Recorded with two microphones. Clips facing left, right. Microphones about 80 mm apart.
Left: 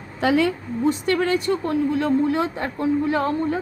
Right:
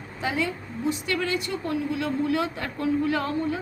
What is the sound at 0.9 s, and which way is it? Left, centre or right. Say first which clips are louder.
A woman's voice: left 6 dB; left.